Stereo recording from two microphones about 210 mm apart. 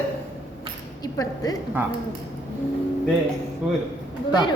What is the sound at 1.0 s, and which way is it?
Speech, 15° left (ahead or behind).